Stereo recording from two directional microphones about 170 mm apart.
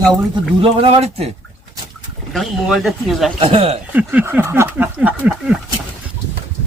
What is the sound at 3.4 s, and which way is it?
Speech, 35° right (ahead or behind).